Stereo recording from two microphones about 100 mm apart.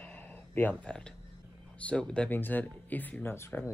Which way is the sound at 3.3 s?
25° left (ahead or behind).